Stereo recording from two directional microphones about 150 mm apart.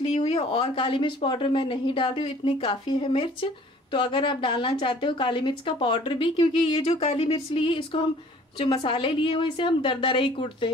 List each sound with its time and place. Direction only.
0.0 s a woman's voice: 40° left (ahead or behind)